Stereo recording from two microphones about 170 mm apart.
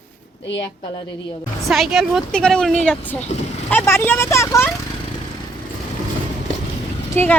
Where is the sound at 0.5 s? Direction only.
25° left (ahead or behind).